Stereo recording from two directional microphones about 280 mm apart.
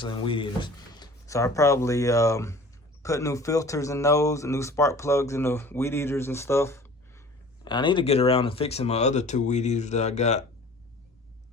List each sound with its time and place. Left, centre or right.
0.0 s speech: centre